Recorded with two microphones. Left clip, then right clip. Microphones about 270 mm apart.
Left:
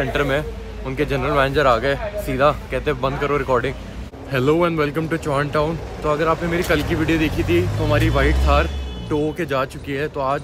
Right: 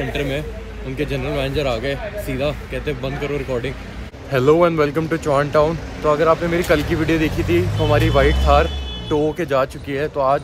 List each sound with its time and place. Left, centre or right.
0.2 s speech: left
4.3 s speech: centre